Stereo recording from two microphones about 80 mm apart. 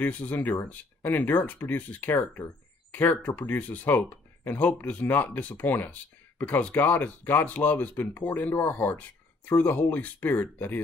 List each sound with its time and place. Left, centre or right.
0.0 s speech: left